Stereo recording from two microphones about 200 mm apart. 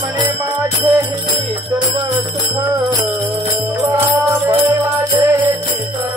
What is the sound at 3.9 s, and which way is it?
Jingle bell, 15° right (ahead or behind).